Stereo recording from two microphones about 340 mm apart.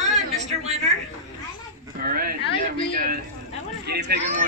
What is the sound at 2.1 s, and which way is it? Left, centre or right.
Speech, right.